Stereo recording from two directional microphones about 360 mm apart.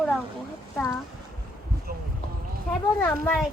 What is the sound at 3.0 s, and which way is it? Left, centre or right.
Speech, centre.